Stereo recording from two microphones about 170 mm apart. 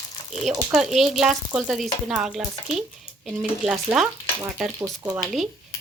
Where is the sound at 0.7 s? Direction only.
Centre (ahead or behind).